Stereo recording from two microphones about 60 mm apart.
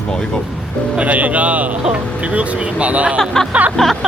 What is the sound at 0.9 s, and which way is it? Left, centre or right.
Speech, right.